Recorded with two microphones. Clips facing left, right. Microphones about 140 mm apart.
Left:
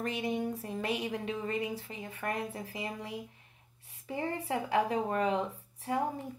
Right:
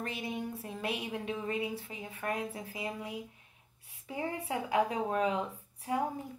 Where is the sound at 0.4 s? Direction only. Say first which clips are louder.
Left 4 dB; 40° left (ahead or behind).